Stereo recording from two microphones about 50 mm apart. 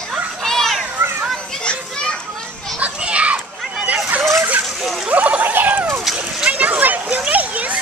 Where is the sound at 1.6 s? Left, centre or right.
Centre.